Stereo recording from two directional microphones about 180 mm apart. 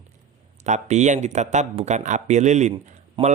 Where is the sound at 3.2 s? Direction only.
30° right (ahead or behind).